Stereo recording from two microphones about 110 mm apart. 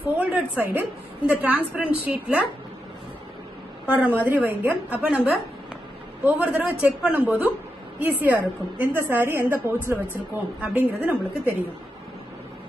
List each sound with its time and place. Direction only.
0.0 s a woman's voice: 15° right (ahead or behind)
3.8 s a woman's voice: 15° right (ahead or behind)